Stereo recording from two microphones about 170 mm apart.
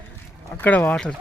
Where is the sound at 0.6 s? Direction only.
10° left (ahead or behind).